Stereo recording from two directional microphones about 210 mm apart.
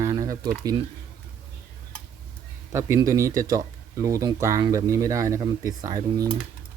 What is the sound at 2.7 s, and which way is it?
Speech, 10° right (ahead or behind).